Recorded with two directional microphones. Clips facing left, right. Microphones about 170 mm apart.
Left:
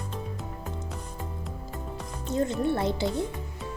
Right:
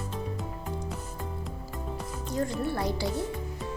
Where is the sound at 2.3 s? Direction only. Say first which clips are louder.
Left 4 dB; 25° left (ahead or behind).